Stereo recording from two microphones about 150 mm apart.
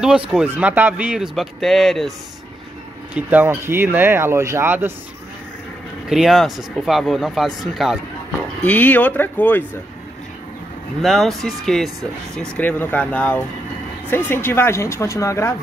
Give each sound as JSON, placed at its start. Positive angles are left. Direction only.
{"t": 0.3, "sound": "speech", "side_deg": -10}
{"t": 3.2, "sound": "speech", "side_deg": -10}
{"t": 6.0, "sound": "speech", "side_deg": 0}
{"t": 8.6, "sound": "speech", "side_deg": 10}
{"t": 11.0, "sound": "speech", "side_deg": 0}